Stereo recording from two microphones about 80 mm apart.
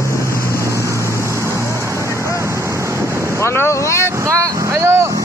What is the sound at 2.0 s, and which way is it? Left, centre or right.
Wind noise, right.